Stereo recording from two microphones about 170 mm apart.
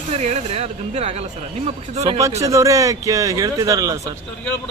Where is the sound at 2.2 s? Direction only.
20° right (ahead or behind).